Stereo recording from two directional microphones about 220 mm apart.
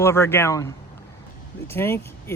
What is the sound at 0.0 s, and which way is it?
Speech, 10° left (ahead or behind).